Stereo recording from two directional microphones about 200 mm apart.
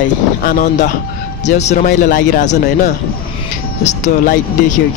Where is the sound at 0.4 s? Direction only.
45° left (ahead or behind).